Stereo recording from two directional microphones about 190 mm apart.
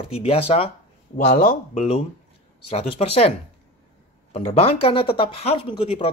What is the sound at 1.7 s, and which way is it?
Speech, 30° left (ahead or behind).